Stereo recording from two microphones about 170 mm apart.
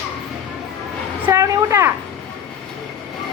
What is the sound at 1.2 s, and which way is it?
Speech, 15° right (ahead or behind).